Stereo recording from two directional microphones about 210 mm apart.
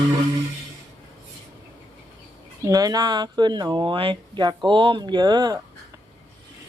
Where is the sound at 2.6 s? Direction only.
15° right (ahead or behind).